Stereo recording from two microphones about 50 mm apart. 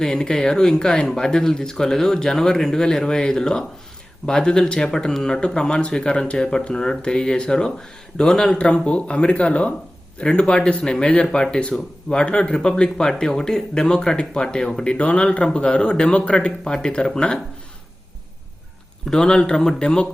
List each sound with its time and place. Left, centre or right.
0.0 s speech: centre
14.9 s speech: left
19.0 s speech: centre